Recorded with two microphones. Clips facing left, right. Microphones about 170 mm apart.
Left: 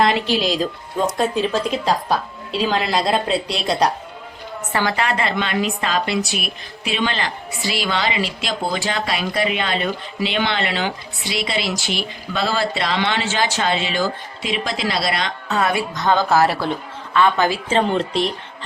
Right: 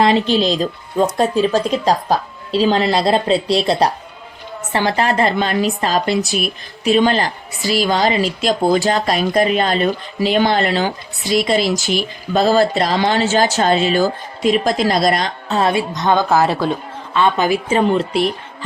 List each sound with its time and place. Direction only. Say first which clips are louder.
0.3 s speech: right 4 dB; 5° left (ahead or behind)
1.8 s speech: right 3 dB; 40° right (ahead or behind)
15.4 s a woman's voice: right 4 dB; 30° right (ahead or behind); by 18.3 s 5° right (ahead or behind)